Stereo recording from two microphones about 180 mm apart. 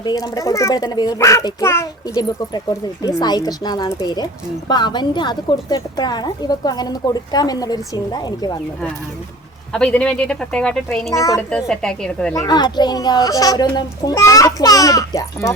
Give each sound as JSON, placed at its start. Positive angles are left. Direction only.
{"t": 0.0, "sound": "a woman's voice", "side_deg": 20}
{"t": 9.7, "sound": "speech", "side_deg": 5}
{"t": 11.1, "sound": "a child's voice", "side_deg": 20}
{"t": 11.5, "sound": "speech", "side_deg": 5}
{"t": 12.3, "sound": "a woman's voice", "side_deg": 20}